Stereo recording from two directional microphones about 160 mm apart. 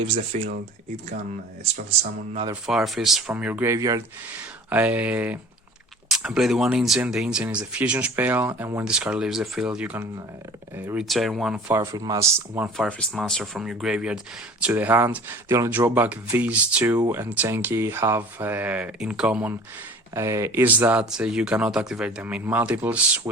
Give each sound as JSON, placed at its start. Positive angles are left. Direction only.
{"t": 0.0, "sound": "speech", "side_deg": -35}
{"t": 2.6, "sound": "speech", "side_deg": 0}
{"t": 4.7, "sound": "speech", "side_deg": -10}
{"t": 11.1, "sound": "speech", "side_deg": 0}
{"t": 11.7, "sound": "speech", "side_deg": -15}
{"t": 12.7, "sound": "speech", "side_deg": 5}
{"t": 20.1, "sound": "speech", "side_deg": -20}